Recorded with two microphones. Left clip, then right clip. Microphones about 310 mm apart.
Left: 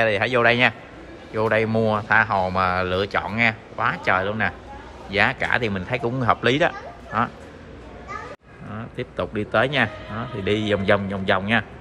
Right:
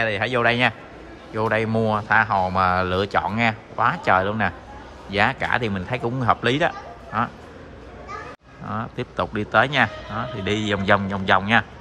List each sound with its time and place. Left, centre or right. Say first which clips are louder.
0.0 s a man's voice: left 2 dB; centre
8.7 s a man's voice: right 3 dB; centre